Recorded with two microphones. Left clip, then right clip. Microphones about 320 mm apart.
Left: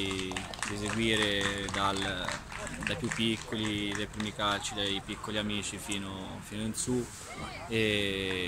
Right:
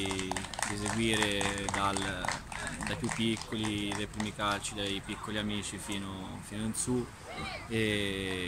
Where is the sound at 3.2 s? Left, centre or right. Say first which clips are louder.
Left 2 dB; centre.